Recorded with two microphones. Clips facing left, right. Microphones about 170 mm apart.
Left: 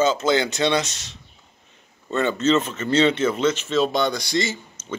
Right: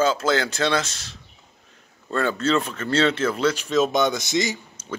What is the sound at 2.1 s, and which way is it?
Speech, centre (ahead or behind).